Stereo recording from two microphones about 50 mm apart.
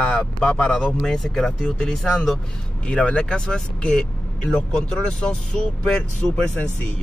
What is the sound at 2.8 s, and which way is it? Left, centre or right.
Speech, left.